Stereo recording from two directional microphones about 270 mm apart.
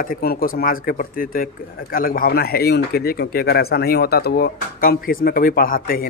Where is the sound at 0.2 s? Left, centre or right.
Left.